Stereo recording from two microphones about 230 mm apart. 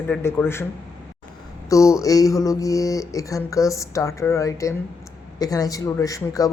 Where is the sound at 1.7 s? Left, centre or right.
Centre.